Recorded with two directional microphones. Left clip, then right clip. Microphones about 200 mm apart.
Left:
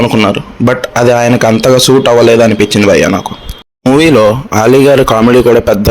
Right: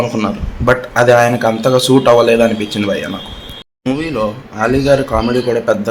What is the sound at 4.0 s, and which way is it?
A man's voice, 45° left (ahead or behind).